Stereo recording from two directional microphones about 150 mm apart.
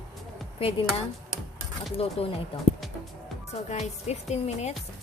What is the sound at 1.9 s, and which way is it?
Speech, 40° left (ahead or behind).